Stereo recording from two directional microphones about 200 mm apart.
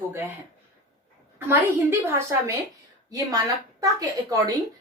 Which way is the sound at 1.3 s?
10° right (ahead or behind).